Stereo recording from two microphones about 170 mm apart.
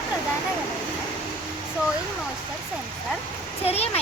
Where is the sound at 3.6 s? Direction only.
35° left (ahead or behind).